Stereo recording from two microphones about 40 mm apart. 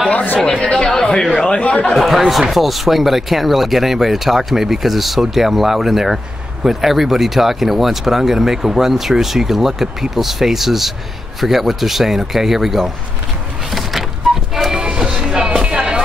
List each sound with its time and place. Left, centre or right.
0.1 s speech: left
0.6 s speech: left
0.8 s a man's voice: centre
2.0 s speech: centre
13.7 s a sound: centre
14.9 s music: right
15.6 s a sound: right